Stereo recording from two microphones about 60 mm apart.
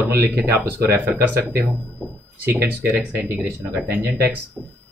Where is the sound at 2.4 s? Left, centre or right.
Right.